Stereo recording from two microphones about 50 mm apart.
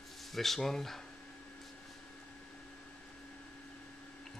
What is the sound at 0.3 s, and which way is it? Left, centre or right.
Speech, centre.